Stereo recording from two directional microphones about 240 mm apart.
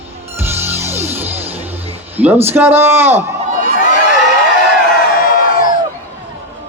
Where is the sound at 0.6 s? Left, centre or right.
Centre.